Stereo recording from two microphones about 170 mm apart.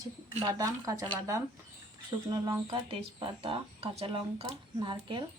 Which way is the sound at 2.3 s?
20° right (ahead or behind).